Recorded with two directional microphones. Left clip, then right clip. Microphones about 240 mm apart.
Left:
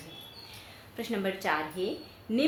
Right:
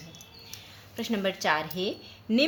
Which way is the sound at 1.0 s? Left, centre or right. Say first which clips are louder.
Right 3 dB; right.